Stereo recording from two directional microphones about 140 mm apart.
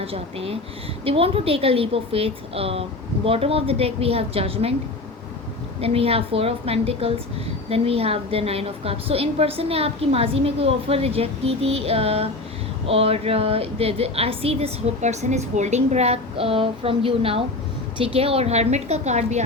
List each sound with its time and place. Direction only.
0.0 s a woman's voice: 45° right (ahead or behind)
5.8 s a woman's voice: 45° right (ahead or behind)